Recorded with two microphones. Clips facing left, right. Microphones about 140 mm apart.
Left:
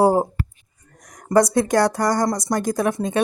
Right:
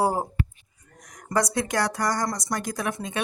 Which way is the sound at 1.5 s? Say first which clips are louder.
Left 8 dB; 45° left (ahead or behind).